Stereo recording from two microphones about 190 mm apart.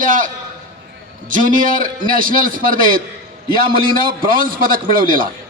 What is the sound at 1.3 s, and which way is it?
A man's voice, 45° right (ahead or behind).